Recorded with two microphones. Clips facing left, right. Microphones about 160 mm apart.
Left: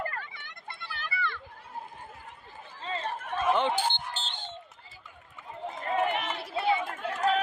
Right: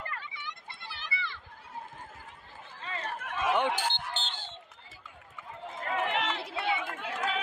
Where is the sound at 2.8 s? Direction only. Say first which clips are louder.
Left 4 dB; 25° left (ahead or behind).